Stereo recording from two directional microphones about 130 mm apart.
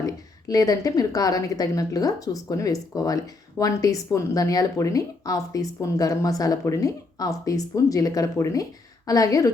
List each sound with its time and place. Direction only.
0.0 s speech: 30° left (ahead or behind)